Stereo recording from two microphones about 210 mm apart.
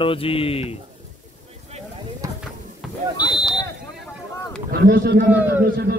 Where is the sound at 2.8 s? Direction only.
Centre (ahead or behind).